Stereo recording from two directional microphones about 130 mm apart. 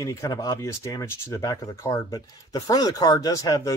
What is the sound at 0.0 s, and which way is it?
Speech, 25° left (ahead or behind).